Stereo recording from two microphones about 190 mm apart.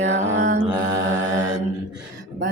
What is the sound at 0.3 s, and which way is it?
Mantra, 40° right (ahead or behind).